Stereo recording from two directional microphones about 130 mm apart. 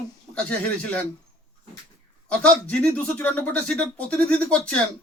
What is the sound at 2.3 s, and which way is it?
Speech, 10° left (ahead or behind).